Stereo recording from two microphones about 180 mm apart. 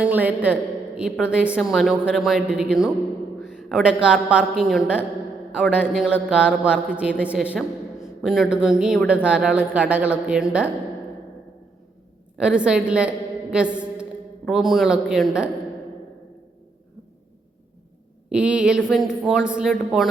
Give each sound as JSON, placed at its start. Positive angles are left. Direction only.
{"t": 0.0, "sound": "a man's voice", "side_deg": -10}
{"t": 12.4, "sound": "a woman's voice", "side_deg": -5}
{"t": 18.3, "sound": "a woman's voice", "side_deg": -5}